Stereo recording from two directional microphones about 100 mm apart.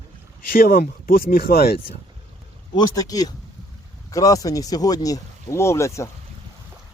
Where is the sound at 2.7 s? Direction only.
40° left (ahead or behind).